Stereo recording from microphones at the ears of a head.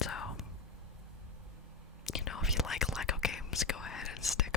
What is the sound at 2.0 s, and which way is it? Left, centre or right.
Whispering, left.